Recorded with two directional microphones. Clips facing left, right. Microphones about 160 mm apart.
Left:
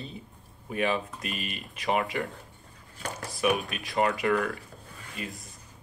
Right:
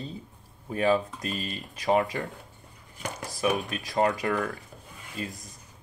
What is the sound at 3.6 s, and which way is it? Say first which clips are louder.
Speech: right 1 dB; 40° right (ahead or behind).